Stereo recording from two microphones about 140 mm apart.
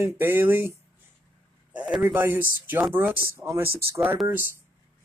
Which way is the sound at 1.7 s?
10° right (ahead or behind).